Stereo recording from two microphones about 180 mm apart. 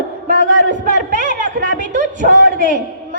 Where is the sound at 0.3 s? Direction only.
45° right (ahead or behind).